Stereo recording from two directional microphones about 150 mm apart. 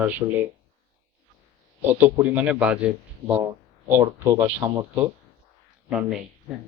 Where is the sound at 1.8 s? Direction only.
15° right (ahead or behind).